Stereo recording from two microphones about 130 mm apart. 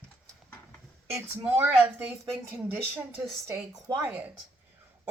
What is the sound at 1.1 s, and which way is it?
A woman's voice, 15° right (ahead or behind).